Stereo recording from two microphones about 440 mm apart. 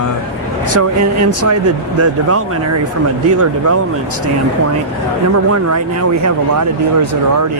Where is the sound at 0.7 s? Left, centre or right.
Right.